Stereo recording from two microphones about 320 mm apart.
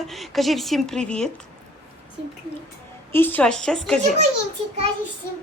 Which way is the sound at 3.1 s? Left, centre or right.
Centre.